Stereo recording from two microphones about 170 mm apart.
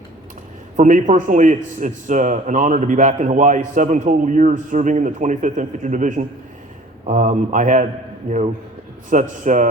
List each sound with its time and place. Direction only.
0.8 s a man's voice: 45° right (ahead or behind)